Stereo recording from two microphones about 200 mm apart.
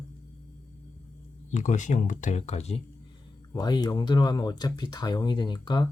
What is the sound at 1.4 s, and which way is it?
Speech, 40° left (ahead or behind).